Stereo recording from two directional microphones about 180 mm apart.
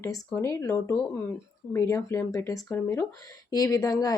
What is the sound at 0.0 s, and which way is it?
Speech, 15° left (ahead or behind).